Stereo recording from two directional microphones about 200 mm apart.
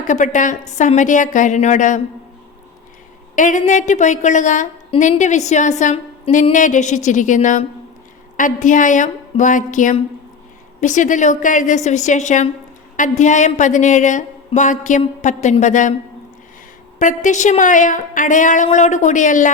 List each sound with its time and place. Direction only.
0.1 s a woman's voice: 40° left (ahead or behind)
3.3 s a woman's voice: 40° left (ahead or behind)
17.0 s a woman's voice: 40° left (ahead or behind)